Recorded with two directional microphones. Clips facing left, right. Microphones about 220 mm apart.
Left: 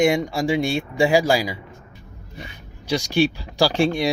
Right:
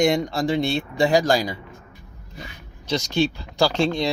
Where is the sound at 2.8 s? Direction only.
15° left (ahead or behind).